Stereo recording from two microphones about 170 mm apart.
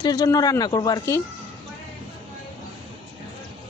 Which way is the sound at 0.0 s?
25° left (ahead or behind).